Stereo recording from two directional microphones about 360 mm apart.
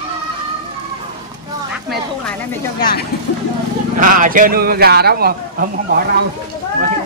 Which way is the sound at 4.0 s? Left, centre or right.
Right.